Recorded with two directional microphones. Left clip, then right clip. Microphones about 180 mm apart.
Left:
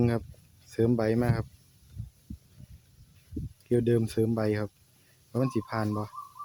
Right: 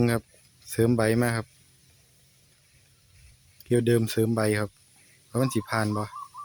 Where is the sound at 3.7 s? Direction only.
5° right (ahead or behind).